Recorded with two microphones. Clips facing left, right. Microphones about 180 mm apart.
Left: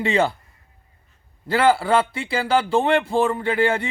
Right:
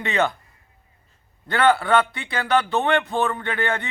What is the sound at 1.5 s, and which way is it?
A man's voice, 30° left (ahead or behind).